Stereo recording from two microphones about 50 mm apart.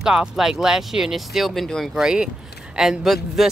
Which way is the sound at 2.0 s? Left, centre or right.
Centre.